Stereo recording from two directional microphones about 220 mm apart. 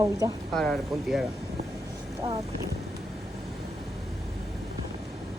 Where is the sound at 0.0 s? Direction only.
15° right (ahead or behind).